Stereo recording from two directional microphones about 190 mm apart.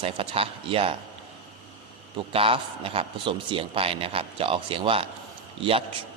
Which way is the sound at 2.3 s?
30° right (ahead or behind).